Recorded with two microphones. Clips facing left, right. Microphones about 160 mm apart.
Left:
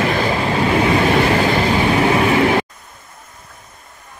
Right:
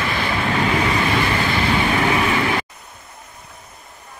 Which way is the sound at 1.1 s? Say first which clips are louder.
Left 6 dB; 45° left (ahead or behind).